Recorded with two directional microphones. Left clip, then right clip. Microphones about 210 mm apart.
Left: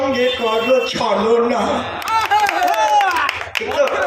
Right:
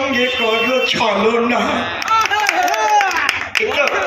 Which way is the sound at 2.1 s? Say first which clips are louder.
Even; centre (ahead or behind).